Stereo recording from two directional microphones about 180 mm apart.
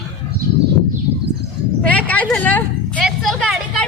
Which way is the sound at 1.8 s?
5° left (ahead or behind).